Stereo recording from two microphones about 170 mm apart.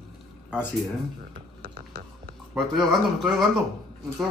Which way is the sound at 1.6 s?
60° right (ahead or behind).